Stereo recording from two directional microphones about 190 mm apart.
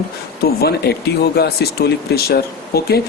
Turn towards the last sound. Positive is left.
turn(degrees=55)  # may be behind; listen again after turning